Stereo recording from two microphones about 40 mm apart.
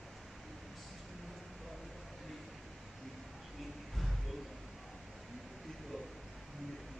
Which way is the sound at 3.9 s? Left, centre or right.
Centre.